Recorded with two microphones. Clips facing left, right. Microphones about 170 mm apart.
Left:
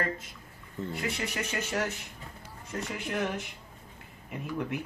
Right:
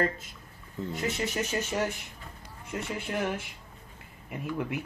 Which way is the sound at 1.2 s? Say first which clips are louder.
Right 3 dB; 20° right (ahead or behind).